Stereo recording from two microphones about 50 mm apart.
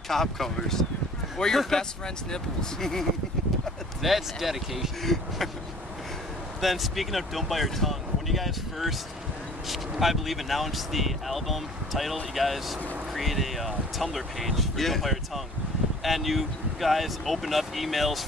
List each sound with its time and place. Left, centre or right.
0.1 s speech: centre
4.0 s speech: centre
6.6 s speech: centre